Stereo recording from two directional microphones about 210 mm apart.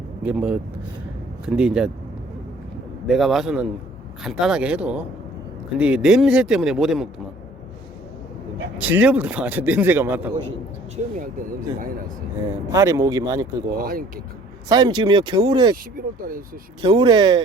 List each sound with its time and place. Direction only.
0.2 s speech: 5° right (ahead or behind)
3.1 s speech: centre (ahead or behind)
8.8 s speech: 10° right (ahead or behind)
10.9 s speech: 40° right (ahead or behind)
12.5 s speech: 15° right (ahead or behind)
13.7 s speech: 45° right (ahead or behind)
14.7 s speech: 20° right (ahead or behind)
15.7 s speech: 45° right (ahead or behind)
16.8 s speech: 20° right (ahead or behind)